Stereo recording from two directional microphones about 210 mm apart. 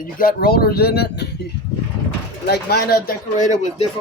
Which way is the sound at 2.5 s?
45° left (ahead or behind).